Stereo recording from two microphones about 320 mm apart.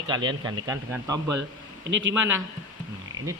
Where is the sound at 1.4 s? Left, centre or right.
Right.